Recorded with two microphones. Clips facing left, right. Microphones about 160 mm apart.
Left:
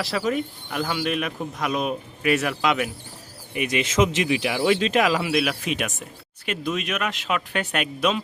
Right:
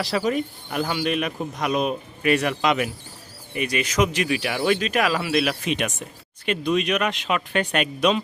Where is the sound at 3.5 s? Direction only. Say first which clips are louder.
Left 1 dB; 15° left (ahead or behind).